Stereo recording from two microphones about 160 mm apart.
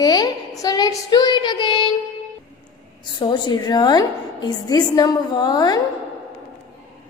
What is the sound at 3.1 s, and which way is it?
A child's voice, 25° left (ahead or behind).